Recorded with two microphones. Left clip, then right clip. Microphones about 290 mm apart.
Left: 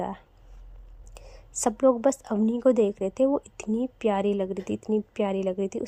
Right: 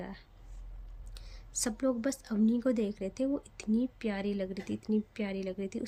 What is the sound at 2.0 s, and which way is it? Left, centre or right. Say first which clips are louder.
A woman's voice: left 9 dB; centre.